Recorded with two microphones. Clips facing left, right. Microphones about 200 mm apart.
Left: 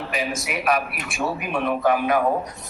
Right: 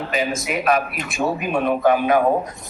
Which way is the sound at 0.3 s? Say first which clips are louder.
Right 2 dB; 25° right (ahead or behind).